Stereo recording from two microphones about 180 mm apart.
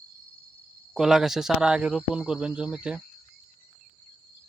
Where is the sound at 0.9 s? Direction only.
Centre (ahead or behind).